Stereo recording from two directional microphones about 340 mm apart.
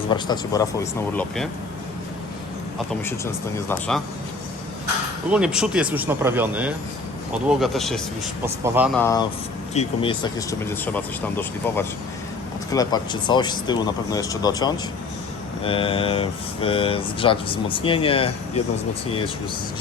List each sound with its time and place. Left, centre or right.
0.1 s speech: centre
2.7 s speech: centre
5.3 s speech: centre